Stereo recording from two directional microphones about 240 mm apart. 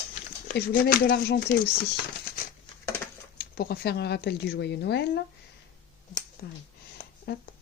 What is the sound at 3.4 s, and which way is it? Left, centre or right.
Speech, left.